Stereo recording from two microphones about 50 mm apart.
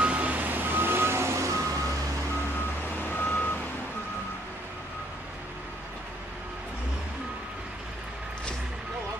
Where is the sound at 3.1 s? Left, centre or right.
Left.